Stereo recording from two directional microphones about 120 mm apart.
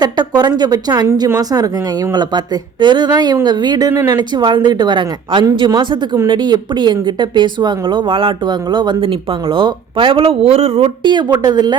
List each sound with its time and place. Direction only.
0.0 s speech: 35° right (ahead or behind)
2.8 s speech: 35° right (ahead or behind); by 11.1 s 55° right (ahead or behind)
11.1 s speech: 35° right (ahead or behind)